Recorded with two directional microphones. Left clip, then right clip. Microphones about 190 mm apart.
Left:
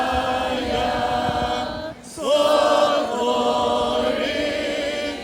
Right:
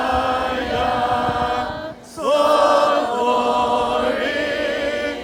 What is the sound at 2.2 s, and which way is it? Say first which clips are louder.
Chant: right 2 dB; centre (ahead or behind).